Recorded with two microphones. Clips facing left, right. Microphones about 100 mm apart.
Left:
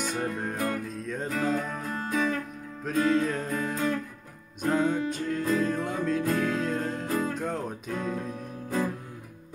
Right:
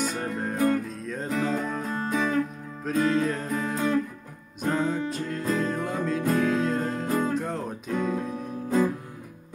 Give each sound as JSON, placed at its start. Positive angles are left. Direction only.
{"t": 0.0, "sound": "music", "side_deg": 0}
{"t": 1.9, "sound": "music", "side_deg": -25}
{"t": 2.8, "sound": "music", "side_deg": 0}